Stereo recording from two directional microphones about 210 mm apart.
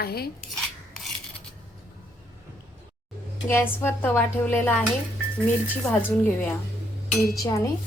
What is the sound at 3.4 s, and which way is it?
Speech, 10° left (ahead or behind).